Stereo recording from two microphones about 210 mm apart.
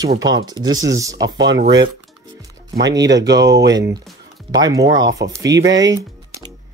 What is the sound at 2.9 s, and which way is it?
Speech, 15° right (ahead or behind).